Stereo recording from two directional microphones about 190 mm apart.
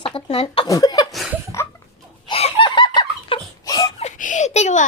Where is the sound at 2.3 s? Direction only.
25° left (ahead or behind).